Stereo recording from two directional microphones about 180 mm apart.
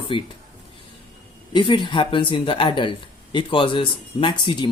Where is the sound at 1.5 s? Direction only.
25° left (ahead or behind).